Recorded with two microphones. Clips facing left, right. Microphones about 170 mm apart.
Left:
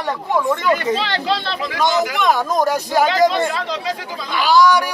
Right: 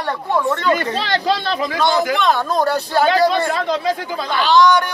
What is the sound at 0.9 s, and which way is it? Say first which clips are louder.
Speech: right 2 dB; 40° right (ahead or behind).